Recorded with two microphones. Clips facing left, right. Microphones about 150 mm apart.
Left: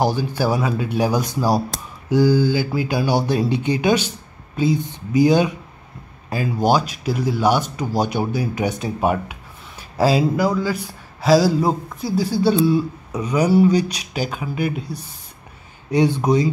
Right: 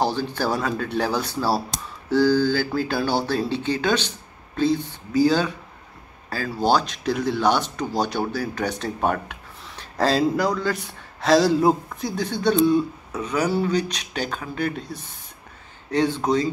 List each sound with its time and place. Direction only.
0.0 s speech: 10° left (ahead or behind)